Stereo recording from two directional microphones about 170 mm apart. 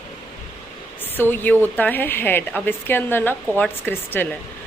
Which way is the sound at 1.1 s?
10° left (ahead or behind).